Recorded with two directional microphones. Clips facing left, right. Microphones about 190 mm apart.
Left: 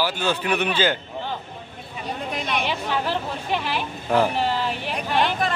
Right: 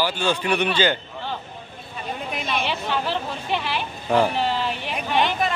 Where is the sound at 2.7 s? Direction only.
10° left (ahead or behind).